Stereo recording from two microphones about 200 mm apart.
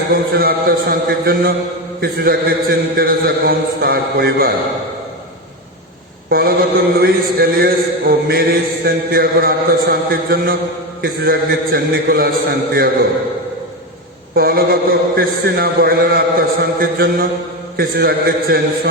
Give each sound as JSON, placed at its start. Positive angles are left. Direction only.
{"t": 0.1, "sound": "a man's voice", "side_deg": -50}
{"t": 6.3, "sound": "a man's voice", "side_deg": -50}
{"t": 14.3, "sound": "a man's voice", "side_deg": -50}